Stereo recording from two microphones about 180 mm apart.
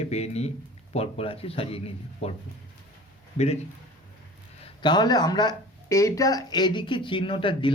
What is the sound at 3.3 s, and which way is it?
Speech, 35° left (ahead or behind).